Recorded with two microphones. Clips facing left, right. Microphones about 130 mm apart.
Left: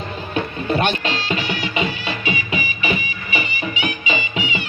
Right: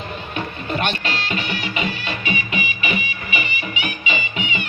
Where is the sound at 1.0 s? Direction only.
25° left (ahead or behind).